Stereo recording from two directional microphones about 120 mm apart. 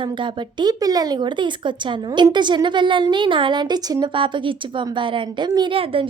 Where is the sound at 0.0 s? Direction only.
40° right (ahead or behind).